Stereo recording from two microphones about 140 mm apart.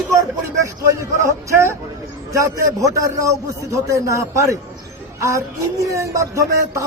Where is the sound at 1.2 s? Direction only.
20° right (ahead or behind).